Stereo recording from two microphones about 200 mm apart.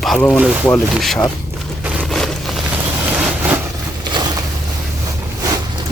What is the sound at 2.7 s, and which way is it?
Vehicle, 5° right (ahead or behind).